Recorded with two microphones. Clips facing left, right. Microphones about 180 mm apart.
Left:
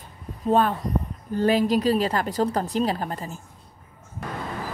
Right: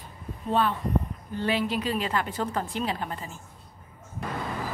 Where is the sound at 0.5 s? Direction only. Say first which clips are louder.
Left 4 dB; 45° left (ahead or behind).